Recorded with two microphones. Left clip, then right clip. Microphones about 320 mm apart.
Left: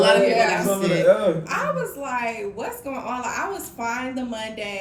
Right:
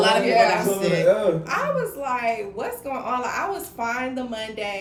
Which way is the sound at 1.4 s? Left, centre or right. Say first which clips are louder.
Right 1 dB; centre.